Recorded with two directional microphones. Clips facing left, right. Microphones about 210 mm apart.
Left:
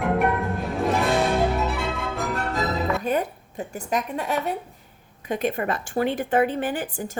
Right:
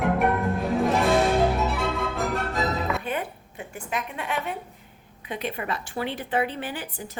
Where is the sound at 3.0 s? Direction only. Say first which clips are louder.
Left 6 dB; 40° left (ahead or behind).